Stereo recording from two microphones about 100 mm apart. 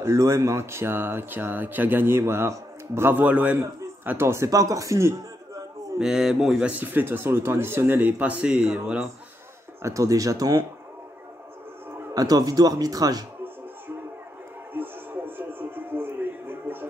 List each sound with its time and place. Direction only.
0.0 s a man's voice: 30° right (ahead or behind)
5.9 s speech: 5° right (ahead or behind)
6.8 s speech: 20° right (ahead or behind)
9.8 s speech: 30° right (ahead or behind)
12.1 s speech: 40° right (ahead or behind)
14.7 s a sound: 20° right (ahead or behind)